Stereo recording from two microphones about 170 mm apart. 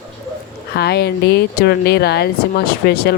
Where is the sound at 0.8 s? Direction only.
75° left (ahead or behind).